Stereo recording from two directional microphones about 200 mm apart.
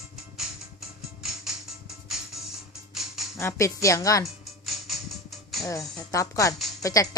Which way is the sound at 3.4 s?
15° left (ahead or behind).